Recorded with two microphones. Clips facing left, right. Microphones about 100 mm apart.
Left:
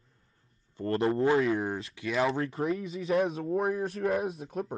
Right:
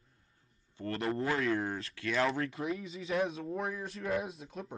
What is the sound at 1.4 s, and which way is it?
Speech, 15° left (ahead or behind).